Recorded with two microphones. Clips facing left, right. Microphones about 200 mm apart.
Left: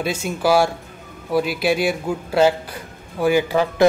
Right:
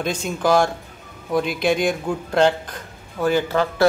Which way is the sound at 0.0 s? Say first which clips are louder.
Left 1 dB; 10° left (ahead or behind).